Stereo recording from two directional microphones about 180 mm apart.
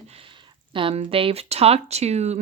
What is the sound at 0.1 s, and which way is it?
Speech, 30° right (ahead or behind).